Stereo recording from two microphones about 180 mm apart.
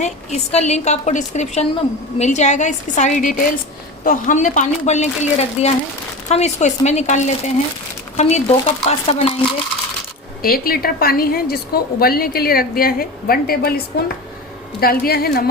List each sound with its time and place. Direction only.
0.0 s a woman's voice: 40° left (ahead or behind)
10.4 s a woman's voice: 55° left (ahead or behind)